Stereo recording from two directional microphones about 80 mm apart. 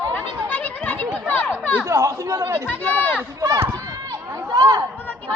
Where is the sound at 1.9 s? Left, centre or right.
Right.